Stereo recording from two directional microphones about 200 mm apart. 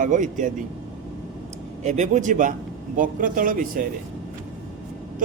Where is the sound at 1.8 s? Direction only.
35° right (ahead or behind).